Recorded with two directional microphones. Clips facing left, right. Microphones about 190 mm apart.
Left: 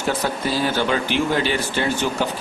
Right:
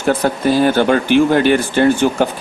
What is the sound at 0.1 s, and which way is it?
Speech, 55° right (ahead or behind).